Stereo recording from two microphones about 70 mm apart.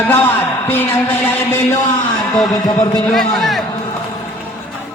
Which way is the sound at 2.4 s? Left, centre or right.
Left.